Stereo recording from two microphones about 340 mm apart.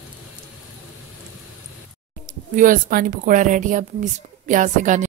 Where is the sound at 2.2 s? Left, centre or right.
Right.